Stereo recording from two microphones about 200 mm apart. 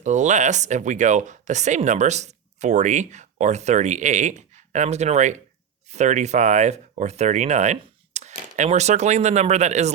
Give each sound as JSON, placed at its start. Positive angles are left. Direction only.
{"t": 0.0, "sound": "speech", "side_deg": -35}